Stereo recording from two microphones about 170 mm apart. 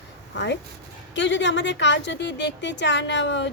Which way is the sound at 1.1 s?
90° left.